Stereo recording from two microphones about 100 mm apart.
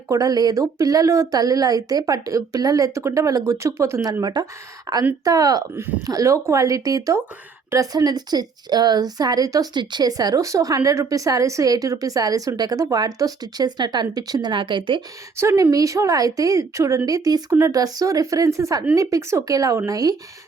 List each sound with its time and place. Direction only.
0.1 s speech: 40° right (ahead or behind)
4.2 s speech: 45° right (ahead or behind)
14.5 s speech: 55° right (ahead or behind)
15.4 s speech: 25° right (ahead or behind)